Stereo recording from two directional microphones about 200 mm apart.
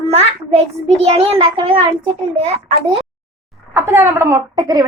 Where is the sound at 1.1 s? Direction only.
30° right (ahead or behind).